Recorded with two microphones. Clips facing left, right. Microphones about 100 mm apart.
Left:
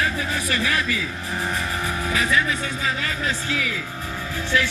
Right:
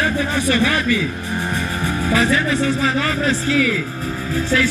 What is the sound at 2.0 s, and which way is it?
Speech, 35° right (ahead or behind).